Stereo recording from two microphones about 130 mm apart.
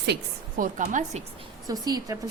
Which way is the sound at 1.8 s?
30° right (ahead or behind).